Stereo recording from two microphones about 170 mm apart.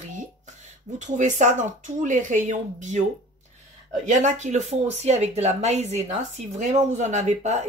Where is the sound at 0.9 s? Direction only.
45° right (ahead or behind).